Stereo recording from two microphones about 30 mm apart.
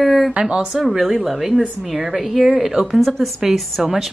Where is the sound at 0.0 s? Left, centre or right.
Centre.